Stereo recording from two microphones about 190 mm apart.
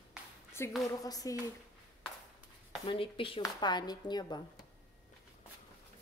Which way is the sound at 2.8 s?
25° left (ahead or behind).